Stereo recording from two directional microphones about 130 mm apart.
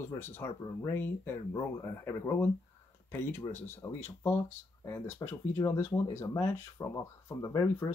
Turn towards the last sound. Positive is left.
turn(degrees=25)  # may be behind; listen again after turning